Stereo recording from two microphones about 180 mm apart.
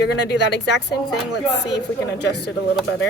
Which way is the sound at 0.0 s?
75° left (ahead or behind).